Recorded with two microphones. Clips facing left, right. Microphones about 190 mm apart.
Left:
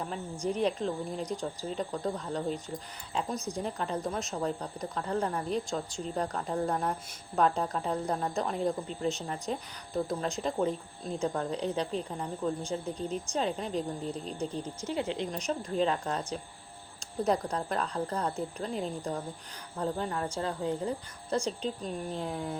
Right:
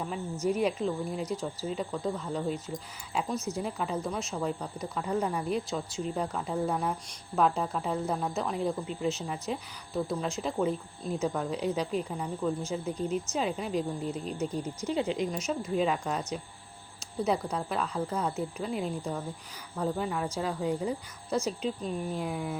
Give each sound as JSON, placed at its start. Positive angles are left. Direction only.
{"t": 0.4, "sound": "speech", "side_deg": -10}